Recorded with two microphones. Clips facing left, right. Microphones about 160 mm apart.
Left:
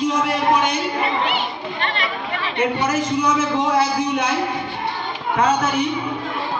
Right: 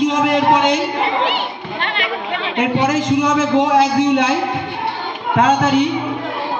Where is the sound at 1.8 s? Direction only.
65° right (ahead or behind); by 4.3 s 85° right.